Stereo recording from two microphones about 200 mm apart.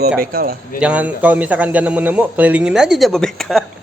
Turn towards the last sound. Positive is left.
turn(degrees=0)  # may be behind; listen again after turning